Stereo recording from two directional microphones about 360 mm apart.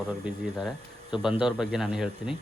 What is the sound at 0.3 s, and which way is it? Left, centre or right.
Speech, centre.